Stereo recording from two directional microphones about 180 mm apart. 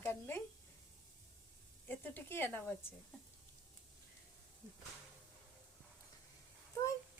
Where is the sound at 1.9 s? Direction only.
10° left (ahead or behind).